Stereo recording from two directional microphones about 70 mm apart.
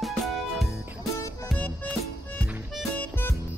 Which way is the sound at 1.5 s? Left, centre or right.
Left.